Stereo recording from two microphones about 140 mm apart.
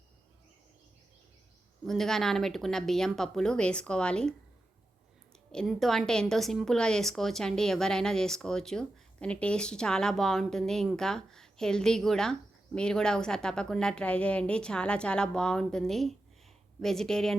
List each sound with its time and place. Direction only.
1.8 s a woman's voice: centre (ahead or behind)
5.5 s a woman's voice: 5° left (ahead or behind)